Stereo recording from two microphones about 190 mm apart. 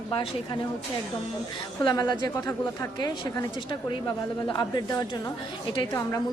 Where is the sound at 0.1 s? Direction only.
25° left (ahead or behind).